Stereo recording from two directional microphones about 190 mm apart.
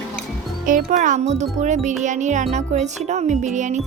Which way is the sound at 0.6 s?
45° right (ahead or behind).